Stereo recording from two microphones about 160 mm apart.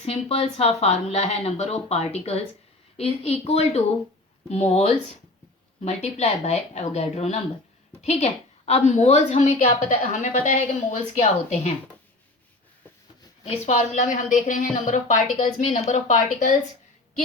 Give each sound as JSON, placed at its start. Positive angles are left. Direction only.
{"t": 0.0, "sound": "a woman's voice", "side_deg": 40}
{"t": 13.4, "sound": "a woman's voice", "side_deg": 50}